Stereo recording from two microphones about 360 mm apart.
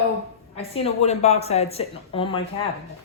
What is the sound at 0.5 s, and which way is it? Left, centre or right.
Speech, centre.